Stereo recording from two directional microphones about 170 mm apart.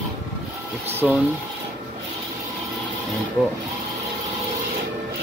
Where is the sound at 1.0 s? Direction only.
5° right (ahead or behind).